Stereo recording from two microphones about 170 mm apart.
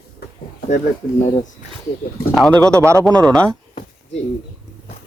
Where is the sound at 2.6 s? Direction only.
15° right (ahead or behind).